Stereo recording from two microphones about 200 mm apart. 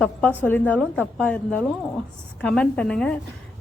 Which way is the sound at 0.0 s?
10° left (ahead or behind).